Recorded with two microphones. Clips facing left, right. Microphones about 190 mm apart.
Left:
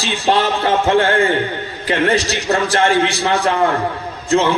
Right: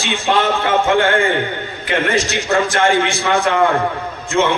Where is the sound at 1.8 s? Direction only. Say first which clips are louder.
Left 2 dB; 35° left (ahead or behind).